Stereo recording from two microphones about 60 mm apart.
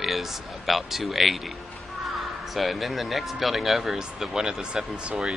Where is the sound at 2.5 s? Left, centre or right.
Centre.